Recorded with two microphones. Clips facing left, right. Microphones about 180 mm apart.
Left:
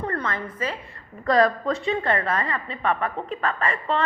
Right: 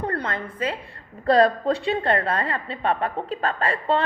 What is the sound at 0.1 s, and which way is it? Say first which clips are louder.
A woman's voice: right 1 dB; 30° right (ahead or behind).